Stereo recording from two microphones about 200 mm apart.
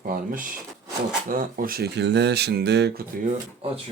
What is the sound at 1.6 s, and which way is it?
Speech, 45° right (ahead or behind).